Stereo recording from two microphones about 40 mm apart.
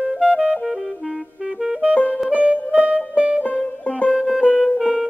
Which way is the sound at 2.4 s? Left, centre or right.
Right.